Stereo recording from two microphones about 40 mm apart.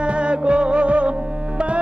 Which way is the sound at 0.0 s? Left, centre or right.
Right.